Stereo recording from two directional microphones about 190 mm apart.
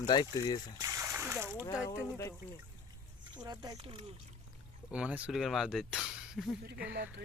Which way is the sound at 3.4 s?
25° right (ahead or behind).